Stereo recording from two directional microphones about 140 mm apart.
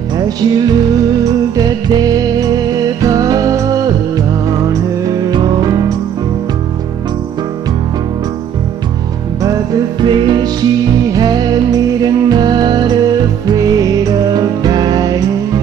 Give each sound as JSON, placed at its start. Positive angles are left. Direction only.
{"t": 0.4, "sound": "music", "side_deg": -30}
{"t": 5.0, "sound": "music", "side_deg": -30}
{"t": 10.0, "sound": "music", "side_deg": -35}